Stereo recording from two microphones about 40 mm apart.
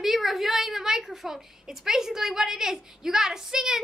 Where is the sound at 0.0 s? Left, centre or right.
Centre.